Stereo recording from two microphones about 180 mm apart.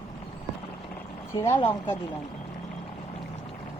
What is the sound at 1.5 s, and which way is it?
Speech, 25° left (ahead or behind).